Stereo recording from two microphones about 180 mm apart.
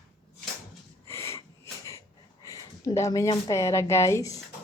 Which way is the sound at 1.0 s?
15° left (ahead or behind).